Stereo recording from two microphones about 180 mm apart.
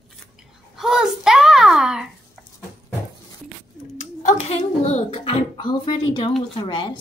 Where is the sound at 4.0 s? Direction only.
45° left (ahead or behind); by 6.3 s 25° left (ahead or behind).